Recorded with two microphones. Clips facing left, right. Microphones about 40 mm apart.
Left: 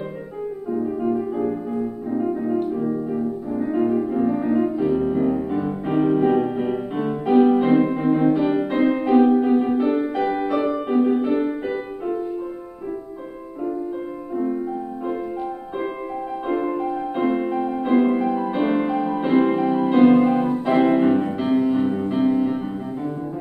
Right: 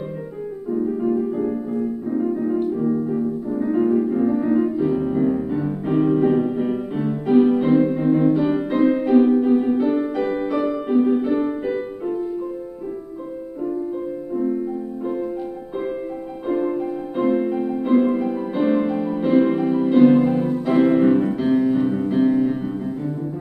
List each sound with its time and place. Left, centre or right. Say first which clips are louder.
0.7 s music: right 2 dB; centre
16.4 s music: right 2 dB; centre